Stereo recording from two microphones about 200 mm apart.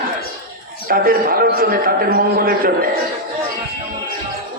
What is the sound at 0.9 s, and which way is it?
A man's voice, 45° right (ahead or behind).